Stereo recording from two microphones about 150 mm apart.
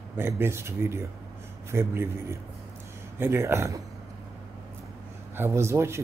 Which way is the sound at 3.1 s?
15° right (ahead or behind).